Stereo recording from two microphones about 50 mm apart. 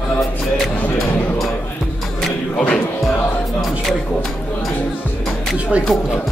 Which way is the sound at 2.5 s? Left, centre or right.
Centre.